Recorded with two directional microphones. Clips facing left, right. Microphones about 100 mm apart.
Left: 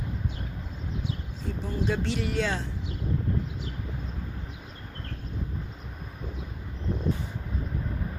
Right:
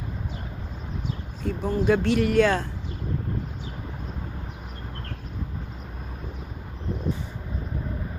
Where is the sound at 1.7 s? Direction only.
55° right (ahead or behind).